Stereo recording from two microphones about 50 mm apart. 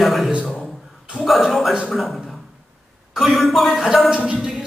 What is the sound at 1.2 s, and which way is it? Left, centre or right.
A man's voice, centre.